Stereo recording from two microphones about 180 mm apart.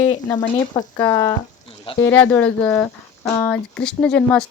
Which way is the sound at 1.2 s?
30° left (ahead or behind).